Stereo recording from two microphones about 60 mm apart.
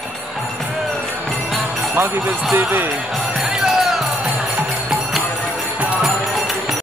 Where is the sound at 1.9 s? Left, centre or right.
Right.